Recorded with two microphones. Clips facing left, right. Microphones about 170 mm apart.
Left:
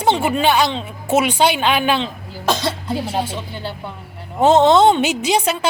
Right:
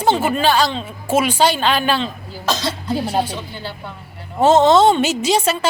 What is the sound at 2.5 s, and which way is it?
Cough, 60° left (ahead or behind).